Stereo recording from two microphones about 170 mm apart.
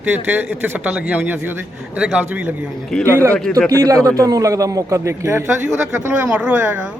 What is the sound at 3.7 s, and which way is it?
A man's voice, 20° right (ahead or behind).